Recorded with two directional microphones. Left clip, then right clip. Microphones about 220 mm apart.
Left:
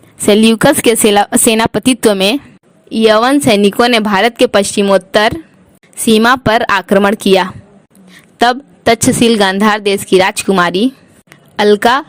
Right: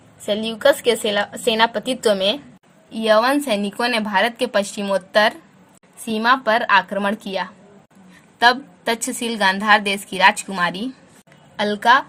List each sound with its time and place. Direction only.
0.3 s a woman's voice: 45° left (ahead or behind)